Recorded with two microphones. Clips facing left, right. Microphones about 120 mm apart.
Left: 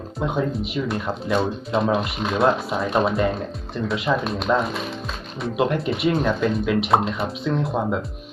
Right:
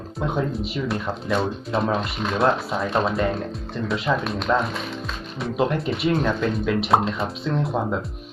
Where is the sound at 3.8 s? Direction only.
5° left (ahead or behind).